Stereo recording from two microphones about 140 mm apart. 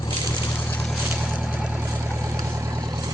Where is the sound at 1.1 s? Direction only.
10° right (ahead or behind).